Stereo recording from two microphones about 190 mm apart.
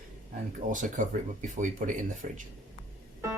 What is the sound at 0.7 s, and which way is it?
Speech, 45° right (ahead or behind).